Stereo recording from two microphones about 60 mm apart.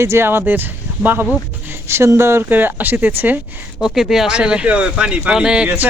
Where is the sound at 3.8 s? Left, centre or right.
Centre.